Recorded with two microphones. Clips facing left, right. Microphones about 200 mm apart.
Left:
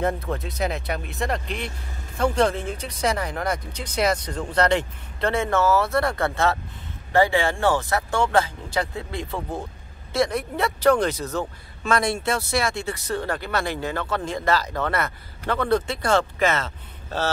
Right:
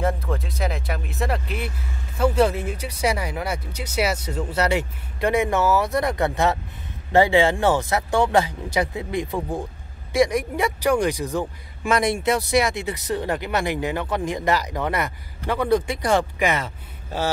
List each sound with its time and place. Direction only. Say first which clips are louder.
0.0 s speech: even; centre (ahead or behind)